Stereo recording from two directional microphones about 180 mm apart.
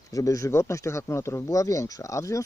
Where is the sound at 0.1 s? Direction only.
20° left (ahead or behind).